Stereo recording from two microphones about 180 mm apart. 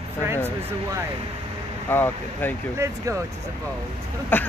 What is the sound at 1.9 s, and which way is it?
Speech, 10° left (ahead or behind).